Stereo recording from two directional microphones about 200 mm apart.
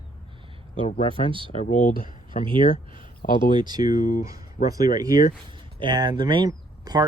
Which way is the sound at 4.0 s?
40° left (ahead or behind).